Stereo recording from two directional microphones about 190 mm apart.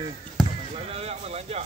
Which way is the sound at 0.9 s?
35° right (ahead or behind).